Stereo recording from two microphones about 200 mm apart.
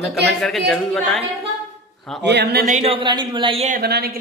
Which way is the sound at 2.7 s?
30° right (ahead or behind).